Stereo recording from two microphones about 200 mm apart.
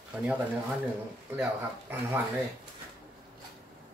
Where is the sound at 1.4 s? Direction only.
10° right (ahead or behind).